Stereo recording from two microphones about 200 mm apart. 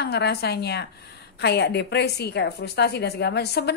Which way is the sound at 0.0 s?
55° left (ahead or behind).